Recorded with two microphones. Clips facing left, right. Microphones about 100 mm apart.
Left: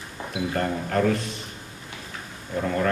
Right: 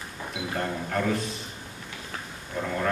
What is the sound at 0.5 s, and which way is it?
Speech, 45° left (ahead or behind).